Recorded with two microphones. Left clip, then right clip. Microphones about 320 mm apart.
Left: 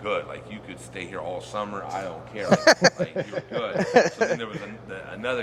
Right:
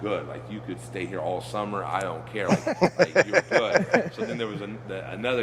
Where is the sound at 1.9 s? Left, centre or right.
Centre.